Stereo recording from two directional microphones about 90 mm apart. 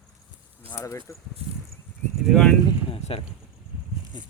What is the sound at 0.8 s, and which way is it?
Speech, 35° left (ahead or behind).